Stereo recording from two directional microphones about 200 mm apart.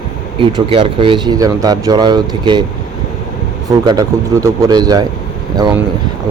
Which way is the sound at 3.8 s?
20° right (ahead or behind).